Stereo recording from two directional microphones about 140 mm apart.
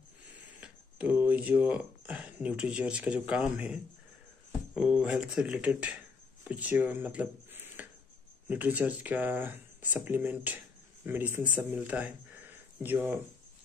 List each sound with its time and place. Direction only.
0.6 s speech: 10° right (ahead or behind)